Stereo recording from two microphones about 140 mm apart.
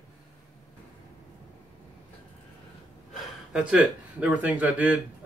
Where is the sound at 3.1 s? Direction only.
5° right (ahead or behind).